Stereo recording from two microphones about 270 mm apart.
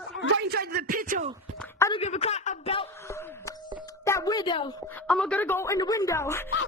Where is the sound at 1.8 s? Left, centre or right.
Centre.